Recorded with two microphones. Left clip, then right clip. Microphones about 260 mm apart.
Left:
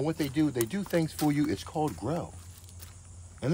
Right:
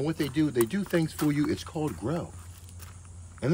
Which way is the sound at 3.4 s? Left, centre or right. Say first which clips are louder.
Right 3 dB; centre.